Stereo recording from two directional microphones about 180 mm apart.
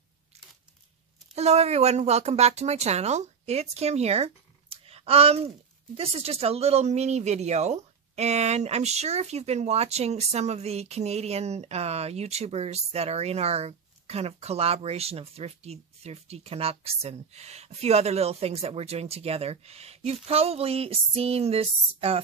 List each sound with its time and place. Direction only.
1.3 s speech: 35° right (ahead or behind)